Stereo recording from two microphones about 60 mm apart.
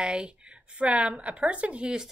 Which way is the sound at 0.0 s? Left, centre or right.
Centre.